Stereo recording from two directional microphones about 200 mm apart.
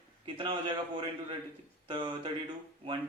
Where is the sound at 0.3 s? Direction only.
25° right (ahead or behind).